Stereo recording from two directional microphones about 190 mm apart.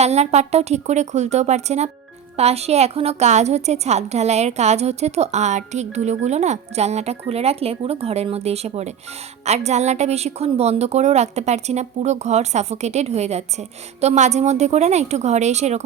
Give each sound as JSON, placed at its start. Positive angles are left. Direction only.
{"t": 0.0, "sound": "a woman's voice", "side_deg": -35}